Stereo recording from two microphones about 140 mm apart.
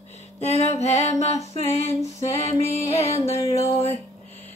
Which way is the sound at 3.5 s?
50° right (ahead or behind).